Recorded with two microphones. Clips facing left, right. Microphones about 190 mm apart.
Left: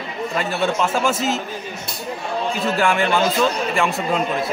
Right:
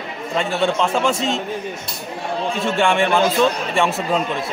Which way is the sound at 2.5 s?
Centre (ahead or behind).